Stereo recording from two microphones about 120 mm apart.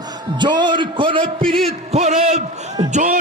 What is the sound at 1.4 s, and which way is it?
Speech, centre (ahead or behind).